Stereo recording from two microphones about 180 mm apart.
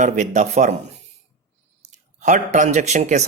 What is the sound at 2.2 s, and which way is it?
Speech, 45° right (ahead or behind).